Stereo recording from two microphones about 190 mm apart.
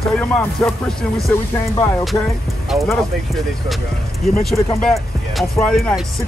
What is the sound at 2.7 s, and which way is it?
Speech, centre (ahead or behind).